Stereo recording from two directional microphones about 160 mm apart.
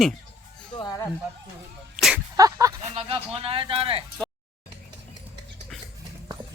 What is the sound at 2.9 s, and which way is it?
Speech, 35° right (ahead or behind).